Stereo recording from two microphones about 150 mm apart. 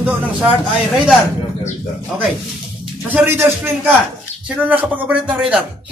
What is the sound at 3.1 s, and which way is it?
Speech, 15° right (ahead or behind).